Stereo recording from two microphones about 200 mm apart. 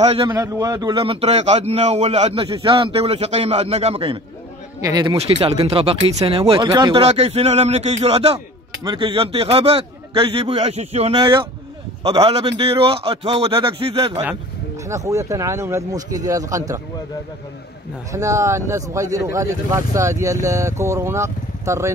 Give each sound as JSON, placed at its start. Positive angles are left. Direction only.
{"t": 0.2, "sound": "a man's voice", "side_deg": -20}
{"t": 5.1, "sound": "a man's voice", "side_deg": -30}
{"t": 14.9, "sound": "speech", "side_deg": -15}
{"t": 18.1, "sound": "speech", "side_deg": -15}